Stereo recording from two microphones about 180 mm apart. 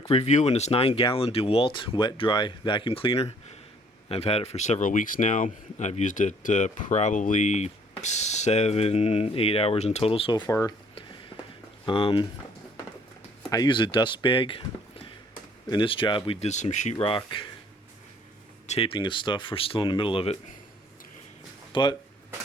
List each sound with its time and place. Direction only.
0.0 s speech: 35° left (ahead or behind); by 10.8 s 20° left (ahead or behind)
11.9 s speech: 30° left (ahead or behind)
13.5 s speech: 25° left (ahead or behind)
18.7 s speech: 30° left (ahead or behind)
21.7 s speech: 25° left (ahead or behind)